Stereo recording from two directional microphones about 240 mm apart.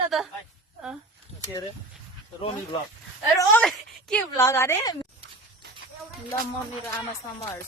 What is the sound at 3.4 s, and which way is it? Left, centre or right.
A woman's voice, centre.